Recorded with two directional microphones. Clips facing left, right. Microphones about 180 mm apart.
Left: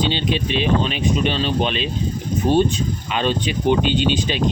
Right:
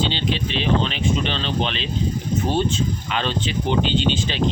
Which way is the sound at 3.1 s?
15° left (ahead or behind).